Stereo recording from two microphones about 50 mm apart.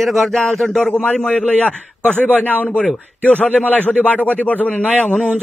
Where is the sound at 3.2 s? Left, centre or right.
Left.